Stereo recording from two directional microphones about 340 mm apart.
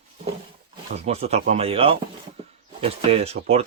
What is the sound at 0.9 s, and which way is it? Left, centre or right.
Speech, centre.